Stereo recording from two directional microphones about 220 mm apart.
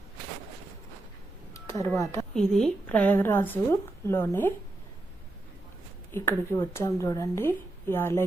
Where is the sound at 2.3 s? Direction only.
5° left (ahead or behind).